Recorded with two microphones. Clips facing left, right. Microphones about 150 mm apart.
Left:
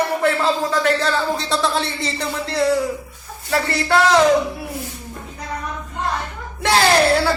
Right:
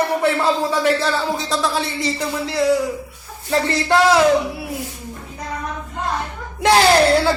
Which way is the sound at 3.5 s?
20° right (ahead or behind).